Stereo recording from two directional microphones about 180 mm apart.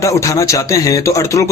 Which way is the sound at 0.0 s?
15° left (ahead or behind).